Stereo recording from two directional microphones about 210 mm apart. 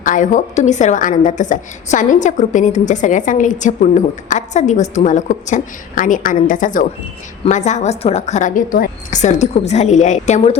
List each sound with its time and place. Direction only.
0.0 s a woman's voice: 40° left (ahead or behind)